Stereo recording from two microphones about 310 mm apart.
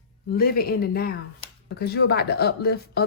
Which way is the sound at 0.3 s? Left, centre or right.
Left.